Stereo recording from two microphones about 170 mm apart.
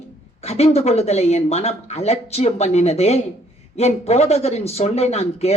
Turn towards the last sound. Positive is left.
turn(degrees=35)  # may be behind; listen again after turning